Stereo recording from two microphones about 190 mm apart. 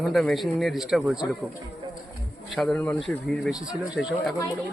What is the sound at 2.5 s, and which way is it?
A man's voice, centre (ahead or behind).